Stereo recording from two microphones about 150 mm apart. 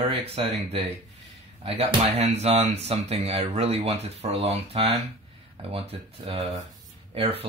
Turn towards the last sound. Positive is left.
turn(degrees=-40)  # may be behind; listen again after turning